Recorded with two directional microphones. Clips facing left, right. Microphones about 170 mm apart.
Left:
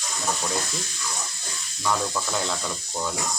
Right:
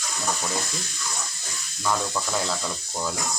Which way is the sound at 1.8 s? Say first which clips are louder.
Even; 5° right (ahead or behind).